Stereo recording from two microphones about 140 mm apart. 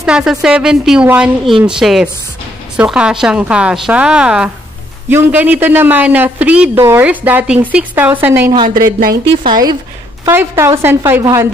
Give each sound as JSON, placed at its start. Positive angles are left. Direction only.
{"t": 0.0, "sound": "a woman's voice", "side_deg": -5}
{"t": 8.6, "sound": "speech", "side_deg": -90}
{"t": 9.5, "sound": "a woman's voice", "side_deg": -30}
{"t": 10.2, "sound": "a woman's voice", "side_deg": -20}